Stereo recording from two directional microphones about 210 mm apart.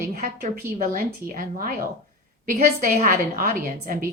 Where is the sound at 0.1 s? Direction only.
40° right (ahead or behind).